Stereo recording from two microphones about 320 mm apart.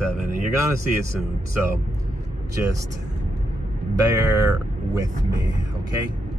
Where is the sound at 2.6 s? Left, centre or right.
Centre.